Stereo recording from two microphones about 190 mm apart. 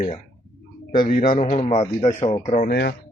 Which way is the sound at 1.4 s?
35° left (ahead or behind).